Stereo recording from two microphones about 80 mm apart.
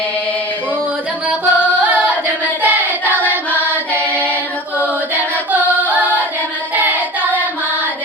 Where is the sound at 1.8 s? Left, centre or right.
Centre.